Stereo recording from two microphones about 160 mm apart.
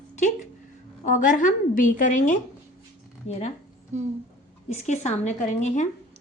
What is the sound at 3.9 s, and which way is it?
Speech, 45° right (ahead or behind).